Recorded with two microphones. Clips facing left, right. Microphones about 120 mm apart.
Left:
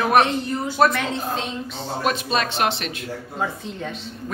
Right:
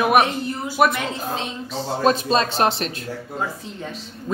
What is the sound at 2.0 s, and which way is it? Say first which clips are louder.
Speech: right 5 dB; 35° right (ahead or behind).